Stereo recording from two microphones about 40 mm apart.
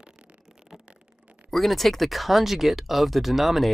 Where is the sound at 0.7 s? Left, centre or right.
Centre.